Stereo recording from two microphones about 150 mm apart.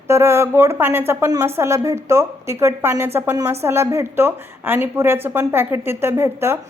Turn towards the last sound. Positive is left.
turn(degrees=-15)  # may be behind; listen again after turning